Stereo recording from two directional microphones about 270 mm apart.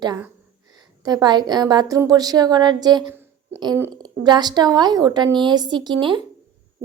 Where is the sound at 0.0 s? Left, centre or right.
Centre.